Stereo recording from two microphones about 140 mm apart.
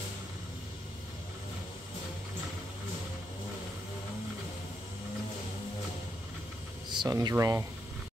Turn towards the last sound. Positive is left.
turn(degrees=-20)  # may be behind; listen again after turning